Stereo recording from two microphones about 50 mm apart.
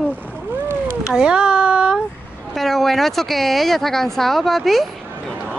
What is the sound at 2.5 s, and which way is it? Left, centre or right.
Speech, centre.